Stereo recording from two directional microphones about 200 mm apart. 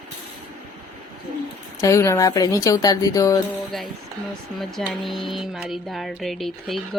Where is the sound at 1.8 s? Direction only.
15° left (ahead or behind).